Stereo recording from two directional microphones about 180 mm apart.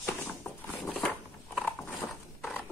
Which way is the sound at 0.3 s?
5° left (ahead or behind).